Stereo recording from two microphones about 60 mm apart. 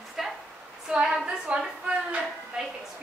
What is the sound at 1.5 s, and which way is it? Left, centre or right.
Speech, right.